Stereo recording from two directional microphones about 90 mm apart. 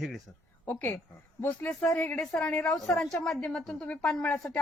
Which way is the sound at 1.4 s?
20° left (ahead or behind).